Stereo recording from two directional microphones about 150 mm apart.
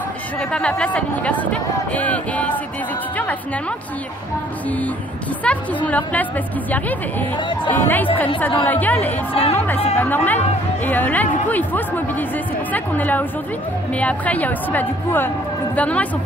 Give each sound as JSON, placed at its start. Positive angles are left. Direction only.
{"t": 0.4, "sound": "speech", "side_deg": 5}
{"t": 4.6, "sound": "speech", "side_deg": 10}
{"t": 7.3, "sound": "speech", "side_deg": 30}
{"t": 7.7, "sound": "speech", "side_deg": 15}
{"t": 9.3, "sound": "speech", "side_deg": 40}
{"t": 9.9, "sound": "speech", "side_deg": 10}